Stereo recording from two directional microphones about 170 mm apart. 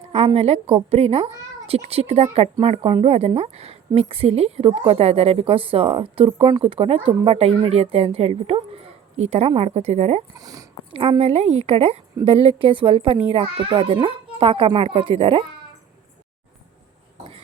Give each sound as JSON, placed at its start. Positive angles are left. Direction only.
{"t": 0.3, "sound": "speech", "side_deg": -35}
{"t": 10.3, "sound": "a child's voice", "side_deg": -20}
{"t": 10.9, "sound": "a child's voice", "side_deg": -35}